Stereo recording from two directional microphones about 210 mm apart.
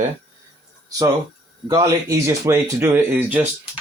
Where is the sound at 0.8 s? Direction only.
15° right (ahead or behind).